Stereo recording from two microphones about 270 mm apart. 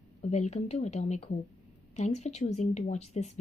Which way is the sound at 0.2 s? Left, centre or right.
Left.